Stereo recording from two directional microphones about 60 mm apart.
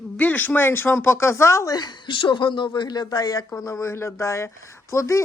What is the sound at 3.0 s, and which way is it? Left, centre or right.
Speech, left.